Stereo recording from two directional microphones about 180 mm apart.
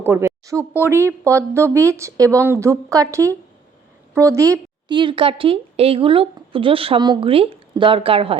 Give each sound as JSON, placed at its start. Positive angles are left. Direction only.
{"t": 0.0, "sound": "a woman's voice", "side_deg": -15}